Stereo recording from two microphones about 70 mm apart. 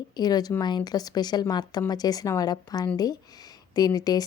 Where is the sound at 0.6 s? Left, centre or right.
Left.